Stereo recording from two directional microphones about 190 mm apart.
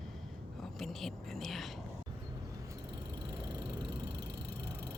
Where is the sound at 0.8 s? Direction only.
Centre (ahead or behind).